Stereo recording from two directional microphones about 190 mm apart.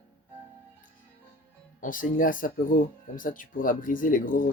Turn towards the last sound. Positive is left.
turn(degrees=45)  # may be behind; listen again after turning